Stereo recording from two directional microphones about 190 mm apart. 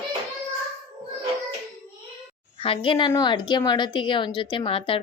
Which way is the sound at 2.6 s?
30° left (ahead or behind).